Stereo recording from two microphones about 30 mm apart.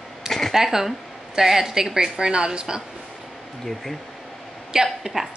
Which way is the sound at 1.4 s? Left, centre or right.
Centre.